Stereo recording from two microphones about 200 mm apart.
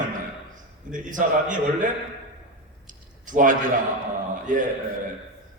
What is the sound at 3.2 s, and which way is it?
A man's voice, 40° right (ahead or behind).